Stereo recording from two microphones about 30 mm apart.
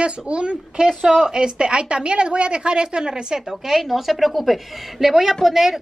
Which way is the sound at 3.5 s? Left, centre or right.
Centre.